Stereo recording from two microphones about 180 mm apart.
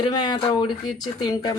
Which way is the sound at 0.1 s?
25° left (ahead or behind).